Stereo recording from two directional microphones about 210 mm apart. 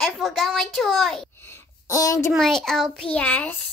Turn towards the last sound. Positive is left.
turn(degrees=10)  # may be behind; listen again after turning